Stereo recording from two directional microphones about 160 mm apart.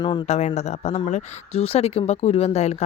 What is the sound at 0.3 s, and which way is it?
Speech, 45° left (ahead or behind).